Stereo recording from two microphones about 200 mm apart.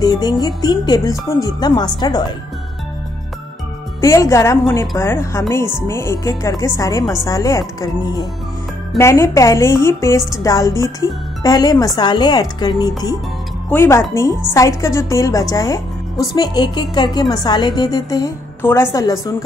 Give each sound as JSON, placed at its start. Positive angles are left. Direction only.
{"t": 0.0, "sound": "a woman's voice", "side_deg": 20}
{"t": 4.0, "sound": "a woman's voice", "side_deg": 15}